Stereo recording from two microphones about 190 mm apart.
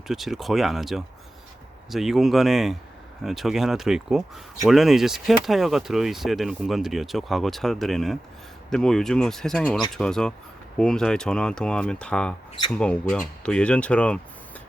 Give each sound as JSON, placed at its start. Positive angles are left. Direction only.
{"t": 0.1, "sound": "speech", "side_deg": 0}